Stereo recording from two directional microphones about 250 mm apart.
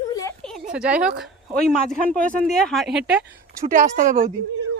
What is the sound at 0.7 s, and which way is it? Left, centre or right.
Speech, centre.